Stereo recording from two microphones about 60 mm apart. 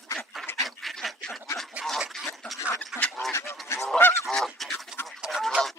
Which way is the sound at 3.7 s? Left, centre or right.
Left.